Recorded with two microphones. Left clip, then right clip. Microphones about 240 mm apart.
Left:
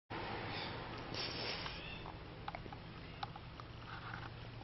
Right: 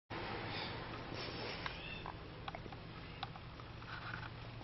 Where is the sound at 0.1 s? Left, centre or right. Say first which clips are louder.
Even; centre.